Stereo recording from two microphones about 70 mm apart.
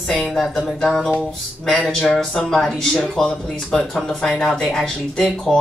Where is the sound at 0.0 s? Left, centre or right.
Centre.